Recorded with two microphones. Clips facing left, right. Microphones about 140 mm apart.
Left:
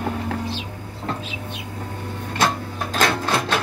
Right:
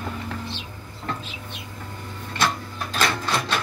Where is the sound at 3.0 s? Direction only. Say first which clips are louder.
Left 3 dB; 50° left (ahead or behind).